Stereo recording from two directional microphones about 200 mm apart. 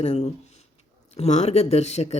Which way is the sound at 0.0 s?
30° left (ahead or behind).